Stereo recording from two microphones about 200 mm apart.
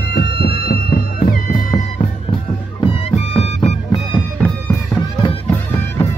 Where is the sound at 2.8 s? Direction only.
30° left (ahead or behind).